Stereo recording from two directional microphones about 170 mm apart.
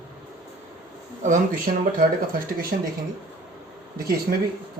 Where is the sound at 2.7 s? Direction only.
60° right (ahead or behind).